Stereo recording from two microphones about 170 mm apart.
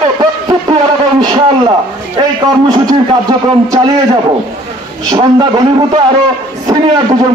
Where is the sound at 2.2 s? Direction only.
25° right (ahead or behind).